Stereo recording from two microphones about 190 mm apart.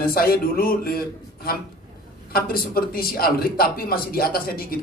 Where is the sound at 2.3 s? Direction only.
50° left (ahead or behind).